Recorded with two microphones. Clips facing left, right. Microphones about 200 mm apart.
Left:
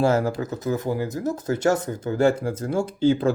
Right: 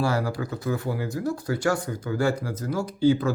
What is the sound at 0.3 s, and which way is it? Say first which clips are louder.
Speech: left 3 dB; 20° left (ahead or behind).